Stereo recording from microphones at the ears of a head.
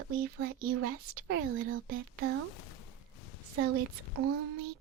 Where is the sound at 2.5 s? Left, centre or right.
Left.